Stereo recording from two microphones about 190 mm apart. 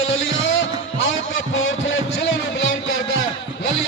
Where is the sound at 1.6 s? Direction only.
90° left.